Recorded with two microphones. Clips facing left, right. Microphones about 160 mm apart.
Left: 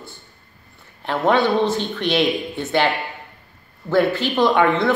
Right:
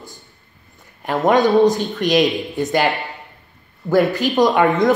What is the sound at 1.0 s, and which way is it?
Speech, 15° right (ahead or behind).